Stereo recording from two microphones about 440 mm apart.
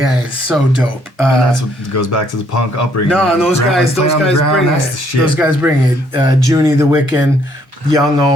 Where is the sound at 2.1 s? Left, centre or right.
Left.